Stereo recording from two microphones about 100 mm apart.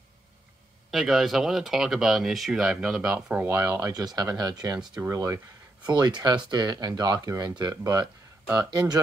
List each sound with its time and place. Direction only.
0.9 s speech: centre (ahead or behind)
3.4 s speech: 25° right (ahead or behind)
3.9 s speech: 40° right (ahead or behind)
5.9 s speech: 45° right (ahead or behind)